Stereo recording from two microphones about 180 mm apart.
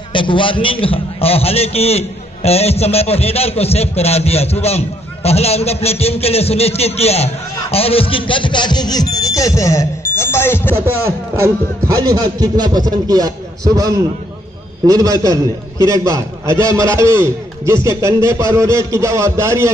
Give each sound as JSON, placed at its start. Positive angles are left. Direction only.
{"t": 0.1, "sound": "a man's voice", "side_deg": 25}
{"t": 12.0, "sound": "a man's voice", "side_deg": -20}